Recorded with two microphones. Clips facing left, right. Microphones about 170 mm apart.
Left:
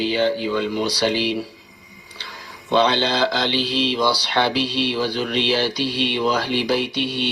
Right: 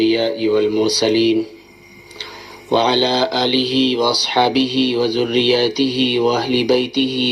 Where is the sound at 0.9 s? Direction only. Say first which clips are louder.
Right 7 dB; 10° right (ahead or behind).